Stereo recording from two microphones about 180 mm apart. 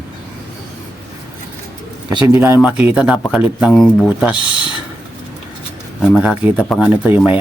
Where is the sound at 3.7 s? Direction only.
5° left (ahead or behind).